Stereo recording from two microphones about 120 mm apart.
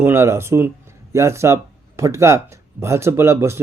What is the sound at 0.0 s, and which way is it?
A man's voice, 20° right (ahead or behind).